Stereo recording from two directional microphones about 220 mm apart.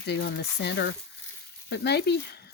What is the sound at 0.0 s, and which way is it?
Speech, 50° left (ahead or behind).